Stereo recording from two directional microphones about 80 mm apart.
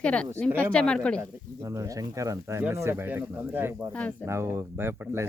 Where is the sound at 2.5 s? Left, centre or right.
Right.